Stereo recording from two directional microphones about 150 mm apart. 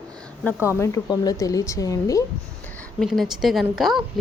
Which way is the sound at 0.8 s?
25° left (ahead or behind).